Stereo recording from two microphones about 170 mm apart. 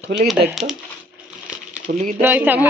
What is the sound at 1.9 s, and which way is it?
Speech, 55° right (ahead or behind).